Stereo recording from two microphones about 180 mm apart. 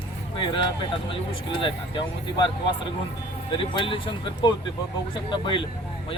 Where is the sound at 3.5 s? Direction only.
30° left (ahead or behind).